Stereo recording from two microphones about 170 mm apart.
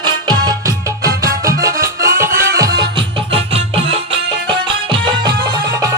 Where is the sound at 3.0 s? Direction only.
35° right (ahead or behind).